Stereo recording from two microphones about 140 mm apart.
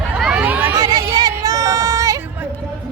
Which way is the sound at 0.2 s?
5° right (ahead or behind).